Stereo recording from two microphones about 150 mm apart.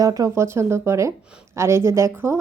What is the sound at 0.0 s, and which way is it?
A woman's voice, 25° right (ahead or behind).